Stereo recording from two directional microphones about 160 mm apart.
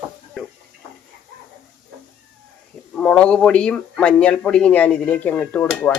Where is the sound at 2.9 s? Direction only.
5° left (ahead or behind).